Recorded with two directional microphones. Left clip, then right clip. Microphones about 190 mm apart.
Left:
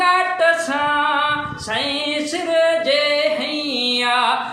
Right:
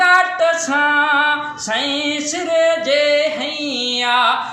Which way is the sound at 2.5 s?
10° left (ahead or behind).